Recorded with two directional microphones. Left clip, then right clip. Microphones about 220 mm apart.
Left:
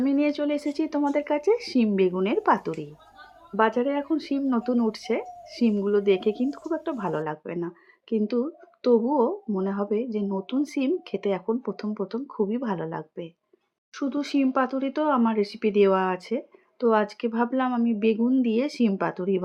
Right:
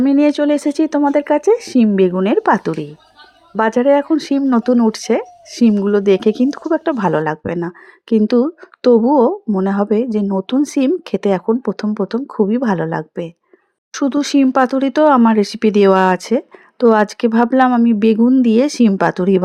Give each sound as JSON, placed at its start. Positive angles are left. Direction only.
{"t": 0.0, "sound": "speech", "side_deg": -45}